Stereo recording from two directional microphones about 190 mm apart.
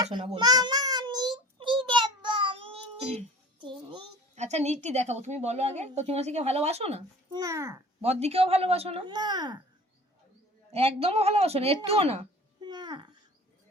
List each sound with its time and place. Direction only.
0.0 s a child's voice: 25° right (ahead or behind)
0.3 s child singing: 20° right (ahead or behind)
4.4 s a woman's voice: 35° right (ahead or behind)
7.3 s a child's voice: 15° right (ahead or behind)
8.0 s a woman's voice: 35° right (ahead or behind)
10.7 s a woman's voice: 30° right (ahead or behind)
12.6 s babbling: 20° right (ahead or behind)